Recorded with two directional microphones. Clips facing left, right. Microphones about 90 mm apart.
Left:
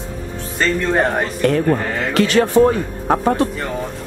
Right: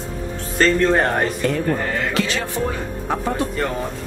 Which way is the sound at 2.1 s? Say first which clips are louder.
Left 8 dB; 55° left (ahead or behind).